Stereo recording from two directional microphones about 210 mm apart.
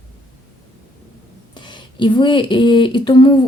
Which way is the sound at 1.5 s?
20° left (ahead or behind).